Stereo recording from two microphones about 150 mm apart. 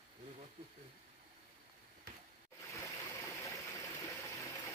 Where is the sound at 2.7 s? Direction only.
20° left (ahead or behind).